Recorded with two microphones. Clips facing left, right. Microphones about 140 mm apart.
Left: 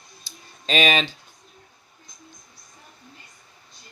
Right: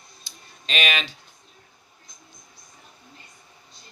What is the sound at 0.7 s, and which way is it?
Speech, 35° left (ahead or behind).